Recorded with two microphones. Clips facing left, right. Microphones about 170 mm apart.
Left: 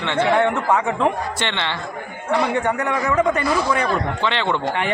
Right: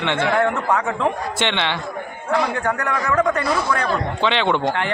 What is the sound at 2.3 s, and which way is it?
A man's voice, 5° left (ahead or behind).